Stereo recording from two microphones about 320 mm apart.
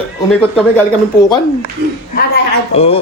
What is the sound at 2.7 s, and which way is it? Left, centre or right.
Speech, centre.